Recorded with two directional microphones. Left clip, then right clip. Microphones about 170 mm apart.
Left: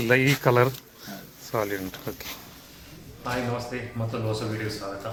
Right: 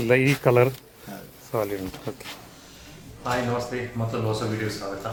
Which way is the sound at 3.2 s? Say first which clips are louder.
Right 3 dB; 5° right (ahead or behind).